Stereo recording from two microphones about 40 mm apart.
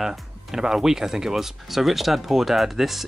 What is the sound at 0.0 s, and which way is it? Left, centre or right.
Speech, centre.